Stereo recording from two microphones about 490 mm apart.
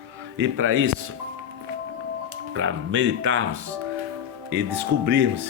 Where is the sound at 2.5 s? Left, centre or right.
Right.